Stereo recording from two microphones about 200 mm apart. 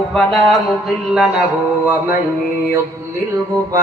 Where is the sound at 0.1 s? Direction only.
Centre (ahead or behind).